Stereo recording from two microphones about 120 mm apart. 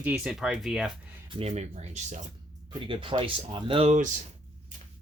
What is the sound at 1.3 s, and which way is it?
Speech, 60° right (ahead or behind).